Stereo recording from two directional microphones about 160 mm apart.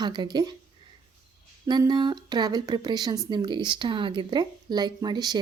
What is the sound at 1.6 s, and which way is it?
Speech, 25° right (ahead or behind).